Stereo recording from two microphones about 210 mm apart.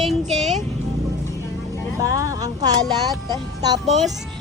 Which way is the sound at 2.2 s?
15° right (ahead or behind).